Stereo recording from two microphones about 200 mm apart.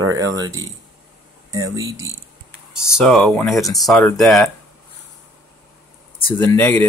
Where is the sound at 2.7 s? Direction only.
5° right (ahead or behind).